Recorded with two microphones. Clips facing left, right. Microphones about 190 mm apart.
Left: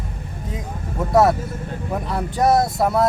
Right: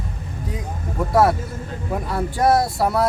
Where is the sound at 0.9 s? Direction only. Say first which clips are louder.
Left 1 dB; centre (ahead or behind).